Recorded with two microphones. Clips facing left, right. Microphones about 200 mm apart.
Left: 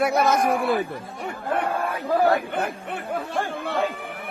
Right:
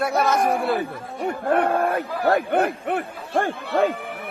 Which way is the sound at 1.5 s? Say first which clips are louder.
Right 5 dB; 55° right (ahead or behind).